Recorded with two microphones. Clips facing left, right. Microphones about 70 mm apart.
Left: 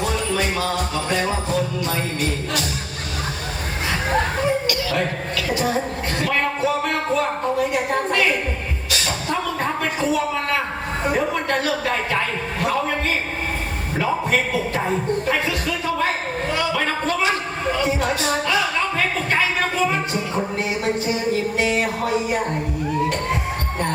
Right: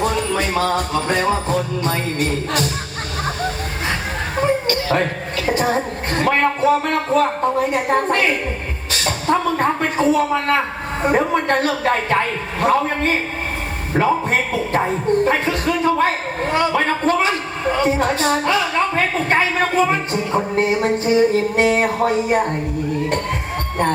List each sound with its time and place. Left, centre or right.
0.0 s music: right
4.7 s a woman's voice: right